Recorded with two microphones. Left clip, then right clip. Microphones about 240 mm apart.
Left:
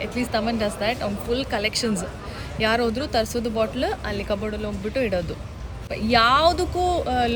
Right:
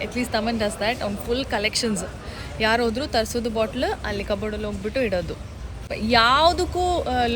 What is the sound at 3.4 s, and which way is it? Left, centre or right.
Speech, right.